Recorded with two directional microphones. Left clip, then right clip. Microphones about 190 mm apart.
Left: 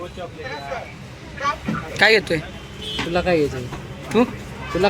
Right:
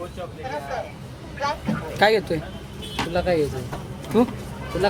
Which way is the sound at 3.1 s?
50° left (ahead or behind).